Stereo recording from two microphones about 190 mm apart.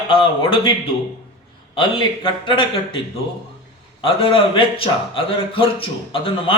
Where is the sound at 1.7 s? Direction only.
25° left (ahead or behind).